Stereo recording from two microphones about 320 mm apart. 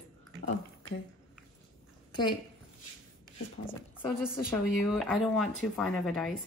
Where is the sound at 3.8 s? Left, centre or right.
Centre.